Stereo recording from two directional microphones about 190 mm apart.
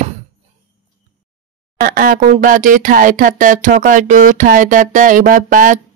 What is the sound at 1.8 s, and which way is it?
Speech, 50° right (ahead or behind).